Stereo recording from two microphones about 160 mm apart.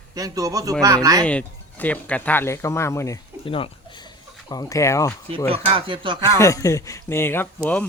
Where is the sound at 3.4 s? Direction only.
35° left (ahead or behind).